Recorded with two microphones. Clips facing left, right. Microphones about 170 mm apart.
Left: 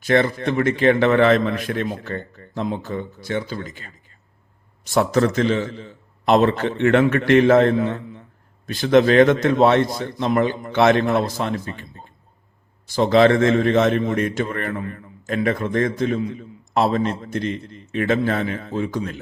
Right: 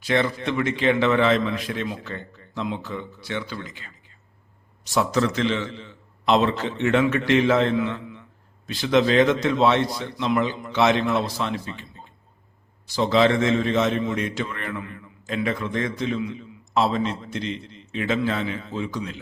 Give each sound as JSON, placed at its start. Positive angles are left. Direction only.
{"t": 0.0, "sound": "a man's voice", "side_deg": 50}
{"t": 12.9, "sound": "a man's voice", "side_deg": 55}